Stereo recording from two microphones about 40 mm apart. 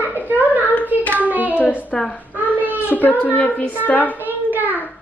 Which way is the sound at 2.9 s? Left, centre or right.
Left.